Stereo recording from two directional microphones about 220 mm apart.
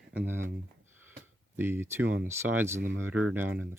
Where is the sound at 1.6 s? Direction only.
10° right (ahead or behind).